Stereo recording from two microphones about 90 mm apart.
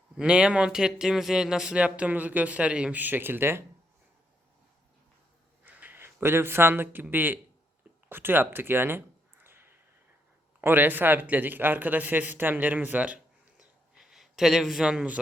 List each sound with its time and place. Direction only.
0.2 s speech: 10° right (ahead or behind); by 3.6 s 25° right (ahead or behind)
5.6 s a man's voice: 20° right (ahead or behind)
8.1 s a sound: 25° right (ahead or behind)
10.6 s a man's voice: 25° right (ahead or behind)